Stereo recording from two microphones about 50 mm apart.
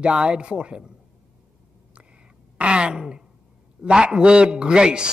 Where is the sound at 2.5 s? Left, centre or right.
Right.